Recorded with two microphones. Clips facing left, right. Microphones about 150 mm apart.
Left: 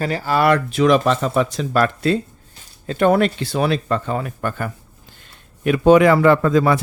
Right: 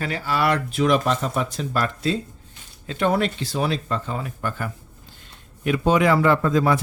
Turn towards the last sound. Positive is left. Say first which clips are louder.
# left 4 dB
turn(degrees=80)